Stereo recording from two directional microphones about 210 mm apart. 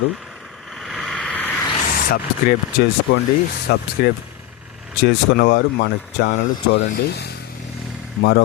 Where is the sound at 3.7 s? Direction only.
45° left (ahead or behind).